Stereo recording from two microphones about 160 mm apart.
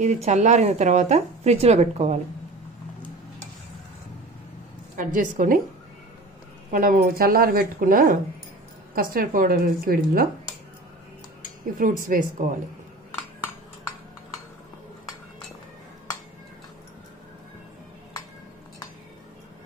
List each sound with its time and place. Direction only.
0.0 s speech: 45° right (ahead or behind)
4.9 s a woman's voice: 55° right (ahead or behind)
6.7 s a woman's voice: 55° right (ahead or behind)
11.8 s a woman's voice: 60° right (ahead or behind)